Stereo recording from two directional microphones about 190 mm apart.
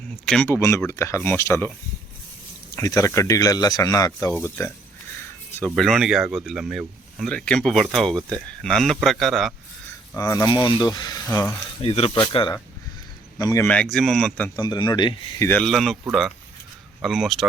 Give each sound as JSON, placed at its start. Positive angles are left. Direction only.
{"t": 0.3, "sound": "speech", "side_deg": 10}
{"t": 2.7, "sound": "speech", "side_deg": 15}
{"t": 10.2, "sound": "speech", "side_deg": 15}
{"t": 11.8, "sound": "speech", "side_deg": 30}
{"t": 13.7, "sound": "speech", "side_deg": 5}
{"t": 14.5, "sound": "speech", "side_deg": 20}
{"t": 15.4, "sound": "speech", "side_deg": 5}
{"t": 17.0, "sound": "speech", "side_deg": 0}